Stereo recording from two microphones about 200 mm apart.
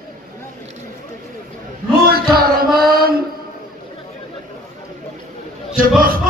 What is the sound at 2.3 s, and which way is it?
Music, 50° right (ahead or behind).